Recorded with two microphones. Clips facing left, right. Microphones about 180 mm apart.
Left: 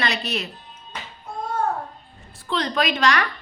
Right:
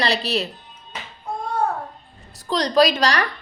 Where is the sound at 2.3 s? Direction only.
40° right (ahead or behind).